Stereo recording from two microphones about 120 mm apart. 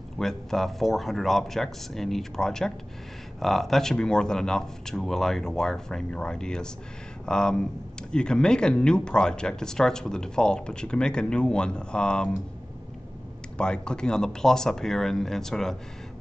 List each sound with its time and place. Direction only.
0.2 s speech: 5° left (ahead or behind)
13.6 s speech: 5° left (ahead or behind)